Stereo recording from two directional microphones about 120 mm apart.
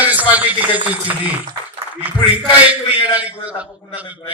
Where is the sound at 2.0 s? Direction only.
15° right (ahead or behind).